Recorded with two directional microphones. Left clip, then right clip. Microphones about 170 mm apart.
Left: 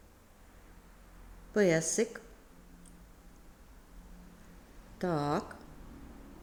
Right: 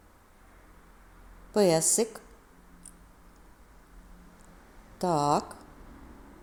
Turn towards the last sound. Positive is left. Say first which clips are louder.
# right 7 dB
turn(degrees=-15)  # may be behind; listen again after turning